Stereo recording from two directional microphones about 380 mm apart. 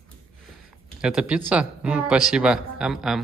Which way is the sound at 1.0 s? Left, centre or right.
Centre.